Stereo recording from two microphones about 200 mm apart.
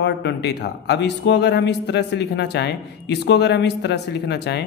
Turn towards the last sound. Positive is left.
turn(degrees=60)  # may be behind; listen again after turning